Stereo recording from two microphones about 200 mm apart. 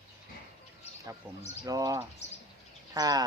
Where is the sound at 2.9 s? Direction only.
20° right (ahead or behind).